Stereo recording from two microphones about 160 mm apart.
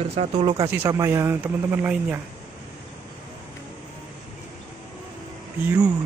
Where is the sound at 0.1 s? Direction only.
35° right (ahead or behind).